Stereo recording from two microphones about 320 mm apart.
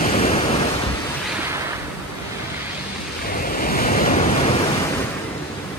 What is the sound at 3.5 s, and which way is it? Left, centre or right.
Waves, left.